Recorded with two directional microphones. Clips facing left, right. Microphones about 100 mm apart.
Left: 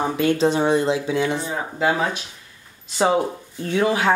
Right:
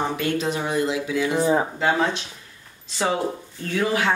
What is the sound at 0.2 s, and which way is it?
Speech, 30° left (ahead or behind).